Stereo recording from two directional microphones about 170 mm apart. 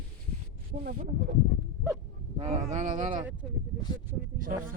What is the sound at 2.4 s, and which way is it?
Speech, 45° right (ahead or behind).